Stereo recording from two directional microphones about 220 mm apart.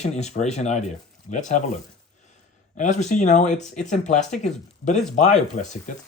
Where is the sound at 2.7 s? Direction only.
35° left (ahead or behind).